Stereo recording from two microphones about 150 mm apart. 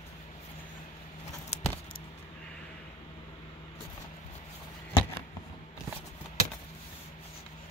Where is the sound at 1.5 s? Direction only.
50° left (ahead or behind).